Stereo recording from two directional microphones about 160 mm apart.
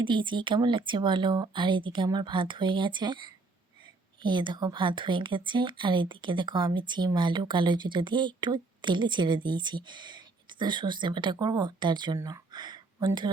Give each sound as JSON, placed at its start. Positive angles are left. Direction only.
{"t": 0.0, "sound": "speech", "side_deg": -30}